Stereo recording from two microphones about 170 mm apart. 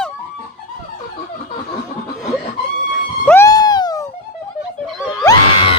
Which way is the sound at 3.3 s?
15° left (ahead or behind).